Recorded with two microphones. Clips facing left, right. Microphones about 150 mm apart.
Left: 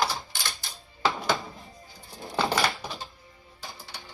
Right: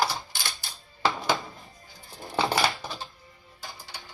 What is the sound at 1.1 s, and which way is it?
Music, centre (ahead or behind).